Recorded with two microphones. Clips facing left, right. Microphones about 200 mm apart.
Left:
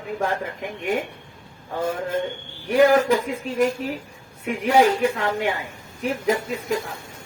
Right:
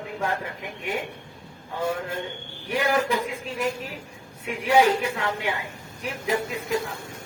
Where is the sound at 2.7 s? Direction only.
45° left (ahead or behind).